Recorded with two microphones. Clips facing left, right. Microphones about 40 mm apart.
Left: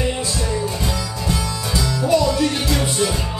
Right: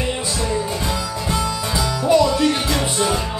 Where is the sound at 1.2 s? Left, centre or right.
Right.